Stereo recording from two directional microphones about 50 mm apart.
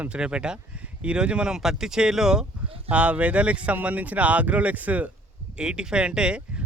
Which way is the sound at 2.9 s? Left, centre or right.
Right.